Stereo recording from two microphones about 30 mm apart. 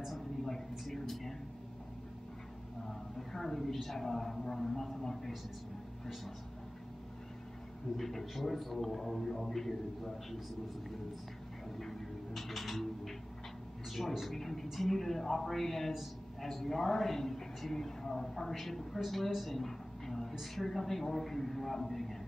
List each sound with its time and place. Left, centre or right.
0.9 s a sound: centre
2.8 s a man's voice: centre
8.0 s a man's voice: centre
11.8 s music: centre
13.8 s a man's voice: centre
15.9 s a sound: centre
16.4 s a man's voice: centre